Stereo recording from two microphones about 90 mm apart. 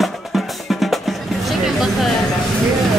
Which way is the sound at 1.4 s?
Centre (ahead or behind).